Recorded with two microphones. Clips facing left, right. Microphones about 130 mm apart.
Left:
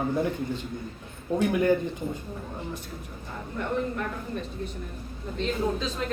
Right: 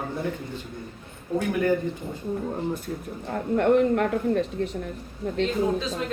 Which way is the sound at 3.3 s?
80° right.